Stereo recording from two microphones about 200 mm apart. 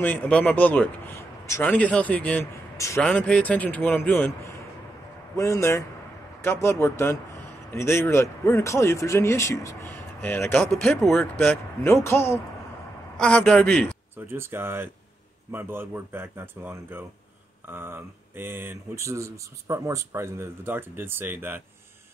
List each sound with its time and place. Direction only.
0.0 s a man's voice: 10° left (ahead or behind)
14.1 s speech: 10° right (ahead or behind)